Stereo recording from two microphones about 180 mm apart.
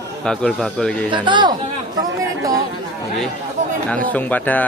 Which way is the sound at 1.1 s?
25° right (ahead or behind).